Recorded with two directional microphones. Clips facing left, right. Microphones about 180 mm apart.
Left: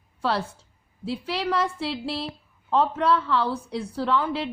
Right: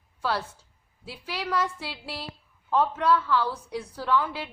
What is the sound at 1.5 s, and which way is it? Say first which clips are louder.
A woman's voice: left 3 dB; 30° left (ahead or behind).